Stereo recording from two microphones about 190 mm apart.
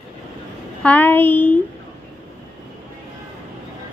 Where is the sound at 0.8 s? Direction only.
10° left (ahead or behind).